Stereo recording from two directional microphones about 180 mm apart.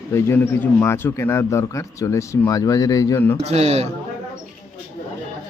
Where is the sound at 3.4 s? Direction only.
35° right (ahead or behind).